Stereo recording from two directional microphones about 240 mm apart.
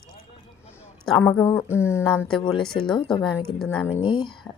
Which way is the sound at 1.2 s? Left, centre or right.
Centre.